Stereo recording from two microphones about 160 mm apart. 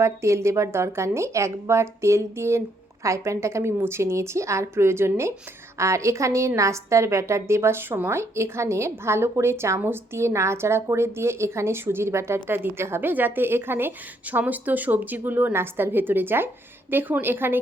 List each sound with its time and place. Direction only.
0.0 s a woman's voice: 15° right (ahead or behind)